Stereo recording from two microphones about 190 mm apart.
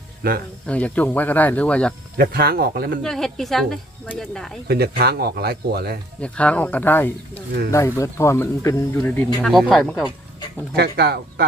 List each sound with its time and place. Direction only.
0.2 s speech: 55° right (ahead or behind)
0.7 s speech: 5° left (ahead or behind)
2.1 s speech: 55° right (ahead or behind)
3.0 s speech: centre (ahead or behind)
4.7 s speech: 55° right (ahead or behind)
6.2 s speech: 5° left (ahead or behind)
10.8 s speech: 60° right (ahead or behind)